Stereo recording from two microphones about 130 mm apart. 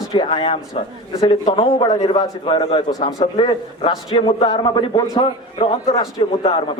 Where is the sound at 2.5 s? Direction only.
50° left (ahead or behind); by 5.3 s 30° left (ahead or behind).